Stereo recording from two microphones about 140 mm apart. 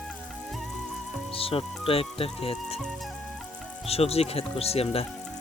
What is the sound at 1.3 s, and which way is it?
Speech, 40° left (ahead or behind).